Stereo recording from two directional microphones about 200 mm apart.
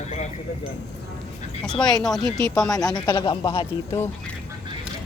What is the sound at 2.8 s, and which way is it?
Speech, 20° left (ahead or behind).